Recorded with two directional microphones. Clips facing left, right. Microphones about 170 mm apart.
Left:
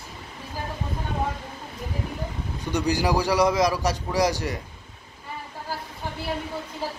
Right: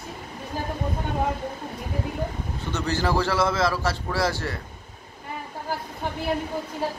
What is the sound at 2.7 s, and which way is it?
A man's voice, 15° left (ahead or behind).